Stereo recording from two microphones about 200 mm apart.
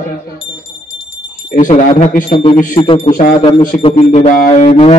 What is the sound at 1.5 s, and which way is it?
Speech, 40° left (ahead or behind).